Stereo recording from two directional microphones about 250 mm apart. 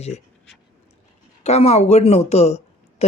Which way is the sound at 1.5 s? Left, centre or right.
Left.